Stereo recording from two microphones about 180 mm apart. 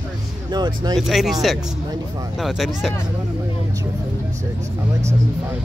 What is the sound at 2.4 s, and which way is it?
Speech, centre (ahead or behind).